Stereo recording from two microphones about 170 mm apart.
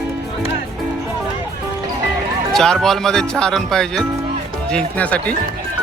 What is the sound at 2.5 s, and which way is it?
Speech, 5° left (ahead or behind).